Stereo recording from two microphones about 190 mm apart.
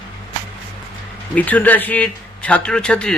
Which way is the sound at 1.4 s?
10° left (ahead or behind).